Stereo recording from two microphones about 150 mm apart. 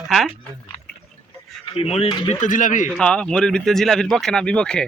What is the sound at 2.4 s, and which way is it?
Speech, 60° left (ahead or behind).